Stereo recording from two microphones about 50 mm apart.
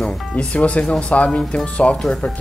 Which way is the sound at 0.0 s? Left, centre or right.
Left.